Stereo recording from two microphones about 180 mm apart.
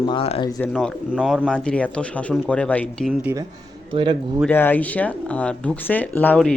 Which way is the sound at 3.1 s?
10° right (ahead or behind).